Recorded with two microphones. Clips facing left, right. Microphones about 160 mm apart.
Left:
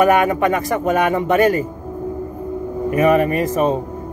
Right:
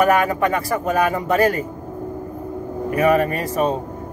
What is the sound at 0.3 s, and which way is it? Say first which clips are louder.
Speech: left 3 dB; 35° right (ahead or behind).